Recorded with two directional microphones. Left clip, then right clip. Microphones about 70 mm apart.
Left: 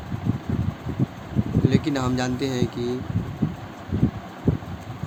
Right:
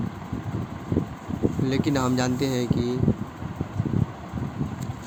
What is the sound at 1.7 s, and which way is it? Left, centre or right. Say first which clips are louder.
Speech: left 1 dB; right.